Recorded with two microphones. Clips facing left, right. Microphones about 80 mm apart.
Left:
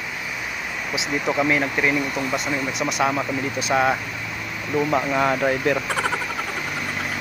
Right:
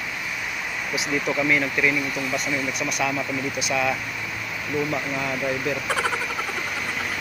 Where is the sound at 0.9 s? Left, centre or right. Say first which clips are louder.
Left 2 dB; left.